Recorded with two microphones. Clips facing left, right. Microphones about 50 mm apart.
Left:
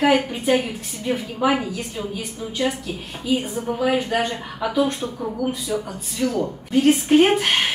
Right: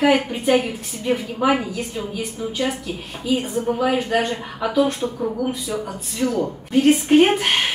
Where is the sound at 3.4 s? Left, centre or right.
Centre.